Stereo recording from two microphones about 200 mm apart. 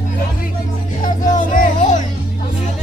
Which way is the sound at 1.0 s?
40° left (ahead or behind).